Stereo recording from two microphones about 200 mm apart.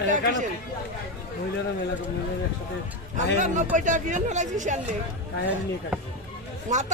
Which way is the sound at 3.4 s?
40° right (ahead or behind).